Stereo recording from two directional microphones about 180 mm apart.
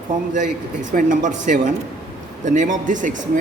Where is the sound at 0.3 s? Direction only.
45° right (ahead or behind).